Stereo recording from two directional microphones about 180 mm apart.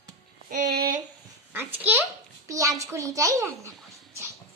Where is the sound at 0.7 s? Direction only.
55° right (ahead or behind).